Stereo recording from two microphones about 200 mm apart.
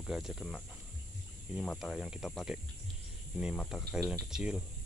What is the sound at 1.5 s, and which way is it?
Speech, centre (ahead or behind).